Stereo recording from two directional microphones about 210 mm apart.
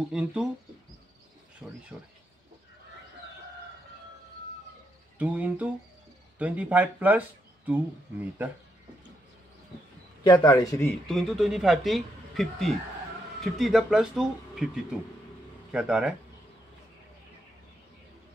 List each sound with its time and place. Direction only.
0.1 s speech: 5° right (ahead or behind)
1.6 s speech: centre (ahead or behind)
5.2 s speech: 5° right (ahead or behind)
10.2 s a man's voice: 20° left (ahead or behind)
11.1 s speech: centre (ahead or behind)